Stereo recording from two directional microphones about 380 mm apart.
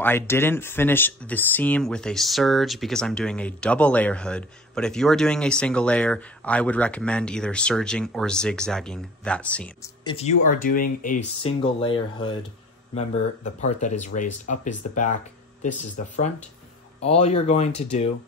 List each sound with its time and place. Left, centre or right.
0.0 s speech: centre